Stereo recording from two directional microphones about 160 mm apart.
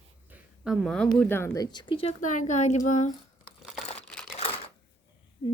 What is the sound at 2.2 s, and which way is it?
Speech, 50° left (ahead or behind).